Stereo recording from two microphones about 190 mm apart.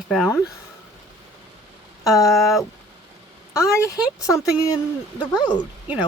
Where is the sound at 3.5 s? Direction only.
15° left (ahead or behind).